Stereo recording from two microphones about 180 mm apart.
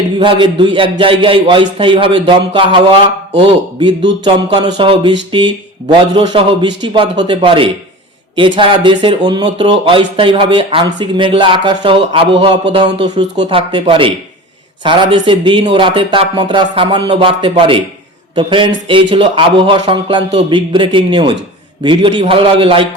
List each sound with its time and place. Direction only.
0.2 s a man's voice: 25° right (ahead or behind)